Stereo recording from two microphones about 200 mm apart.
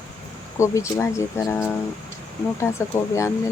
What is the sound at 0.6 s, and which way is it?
Speech, 15° left (ahead or behind).